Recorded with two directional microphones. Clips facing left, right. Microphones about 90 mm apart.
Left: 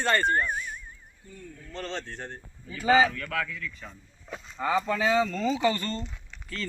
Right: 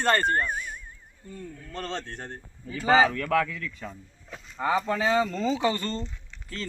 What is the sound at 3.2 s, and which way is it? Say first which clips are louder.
Speech: right 7 dB; 90° right.